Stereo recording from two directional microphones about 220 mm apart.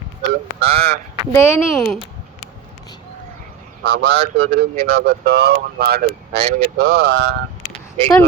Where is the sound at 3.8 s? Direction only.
50° right (ahead or behind).